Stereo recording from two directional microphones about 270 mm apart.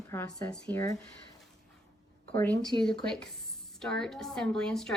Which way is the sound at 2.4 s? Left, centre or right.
Centre.